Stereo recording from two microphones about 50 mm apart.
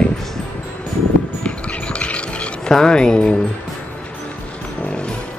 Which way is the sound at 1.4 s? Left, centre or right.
Left.